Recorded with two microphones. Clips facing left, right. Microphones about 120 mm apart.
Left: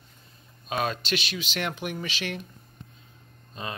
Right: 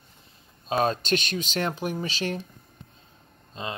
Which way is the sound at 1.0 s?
45° right (ahead or behind).